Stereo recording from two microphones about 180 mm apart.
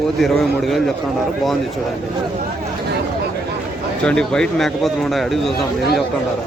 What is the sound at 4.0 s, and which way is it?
A man's voice, 5° left (ahead or behind).